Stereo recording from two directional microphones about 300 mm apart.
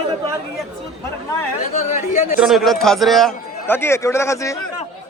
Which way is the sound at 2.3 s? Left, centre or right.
Centre.